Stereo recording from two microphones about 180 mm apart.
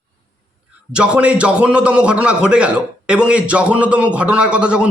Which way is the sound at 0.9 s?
5° right (ahead or behind).